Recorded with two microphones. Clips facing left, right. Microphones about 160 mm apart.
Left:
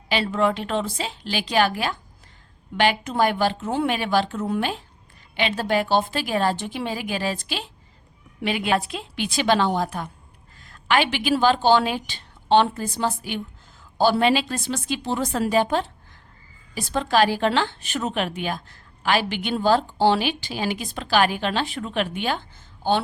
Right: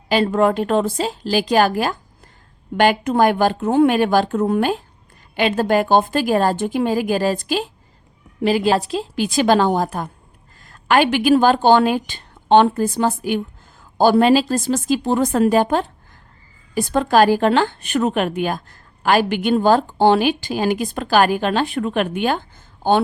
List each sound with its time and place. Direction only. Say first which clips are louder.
0.1 s a woman's voice: right 6 dB; 45° right (ahead or behind)